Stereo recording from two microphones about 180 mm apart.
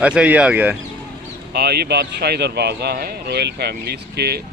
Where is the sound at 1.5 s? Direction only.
60° right (ahead or behind).